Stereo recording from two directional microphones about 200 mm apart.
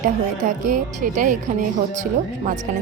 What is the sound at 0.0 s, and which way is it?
A woman's voice, 45° right (ahead or behind).